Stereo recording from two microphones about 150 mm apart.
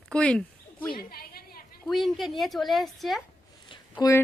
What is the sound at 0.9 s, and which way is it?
Speech, 85° left.